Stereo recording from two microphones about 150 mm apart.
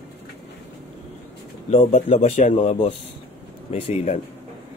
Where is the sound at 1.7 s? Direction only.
45° left (ahead or behind).